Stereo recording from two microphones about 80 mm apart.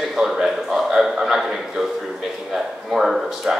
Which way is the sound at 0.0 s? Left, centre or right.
Centre.